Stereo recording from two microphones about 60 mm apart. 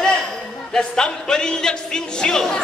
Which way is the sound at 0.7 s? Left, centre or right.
Centre.